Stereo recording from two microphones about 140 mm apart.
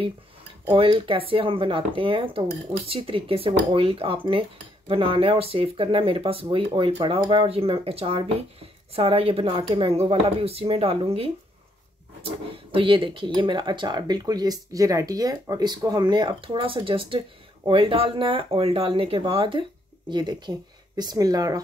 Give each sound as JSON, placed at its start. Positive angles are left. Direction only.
{"t": 0.7, "sound": "speech", "side_deg": -40}
{"t": 12.7, "sound": "speech", "side_deg": -35}